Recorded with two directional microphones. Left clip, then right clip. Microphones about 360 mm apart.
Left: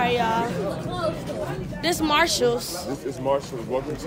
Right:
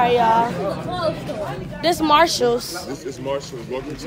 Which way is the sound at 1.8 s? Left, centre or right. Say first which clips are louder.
Right 6 dB; centre.